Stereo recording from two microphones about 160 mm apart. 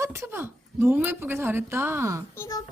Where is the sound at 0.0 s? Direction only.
15° right (ahead or behind).